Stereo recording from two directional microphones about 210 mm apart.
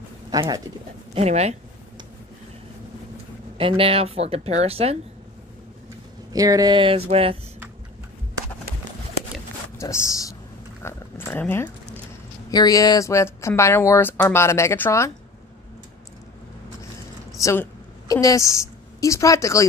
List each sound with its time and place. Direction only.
0.3 s speech: 20° right (ahead or behind)
1.1 s speech: 30° right (ahead or behind)
3.5 s speech: 25° right (ahead or behind)
6.3 s speech: 15° right (ahead or behind)
9.8 s speech: 15° left (ahead or behind)
10.8 s a sound: 10° left (ahead or behind)
12.4 s speech: 15° left (ahead or behind)
17.4 s a woman's voice: 15° left (ahead or behind)